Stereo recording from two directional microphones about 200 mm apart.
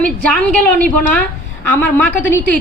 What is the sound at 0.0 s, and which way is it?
A woman's voice, 5° left (ahead or behind).